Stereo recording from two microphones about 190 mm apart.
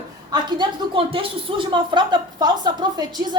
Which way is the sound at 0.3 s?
25° right (ahead or behind).